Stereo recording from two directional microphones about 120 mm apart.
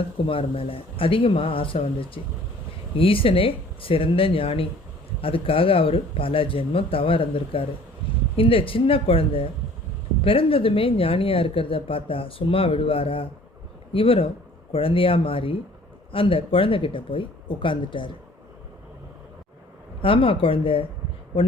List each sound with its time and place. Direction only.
0.3 s a woman's voice: 50° left (ahead or behind)
20.0 s a woman's voice: 45° left (ahead or behind)